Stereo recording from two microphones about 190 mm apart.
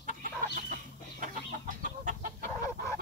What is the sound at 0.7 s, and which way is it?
Chicken, 45° right (ahead or behind).